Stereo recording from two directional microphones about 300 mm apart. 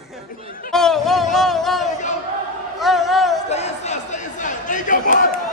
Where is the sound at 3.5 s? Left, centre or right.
Left.